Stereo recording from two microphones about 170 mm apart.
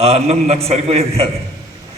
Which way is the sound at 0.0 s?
35° right (ahead or behind).